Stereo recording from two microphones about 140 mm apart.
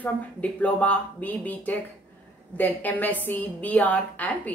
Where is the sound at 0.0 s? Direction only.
10° left (ahead or behind).